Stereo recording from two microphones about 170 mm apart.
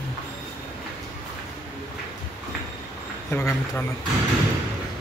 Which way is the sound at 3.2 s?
15° left (ahead or behind).